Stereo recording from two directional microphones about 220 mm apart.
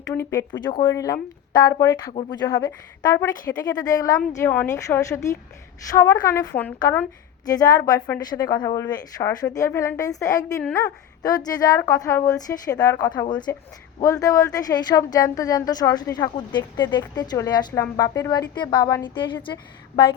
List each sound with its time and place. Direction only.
0.1 s a woman's voice: 10° left (ahead or behind)
10.6 s a woman's voice: 5° left (ahead or behind)
11.2 s a woman's voice: 15° left (ahead or behind)